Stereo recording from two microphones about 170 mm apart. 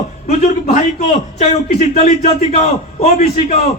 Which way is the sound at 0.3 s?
45° left (ahead or behind).